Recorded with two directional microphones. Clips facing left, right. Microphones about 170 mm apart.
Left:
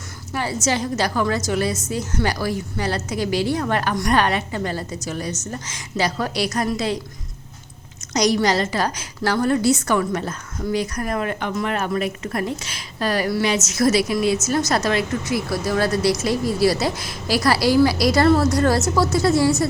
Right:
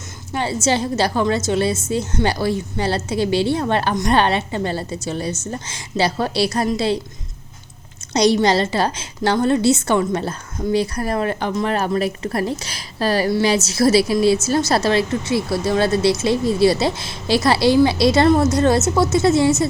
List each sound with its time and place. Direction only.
0.3 s a woman's voice: 25° right (ahead or behind)
8.1 s a woman's voice: 30° right (ahead or behind)